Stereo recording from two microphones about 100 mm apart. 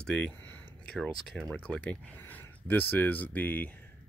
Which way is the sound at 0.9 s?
5° left (ahead or behind).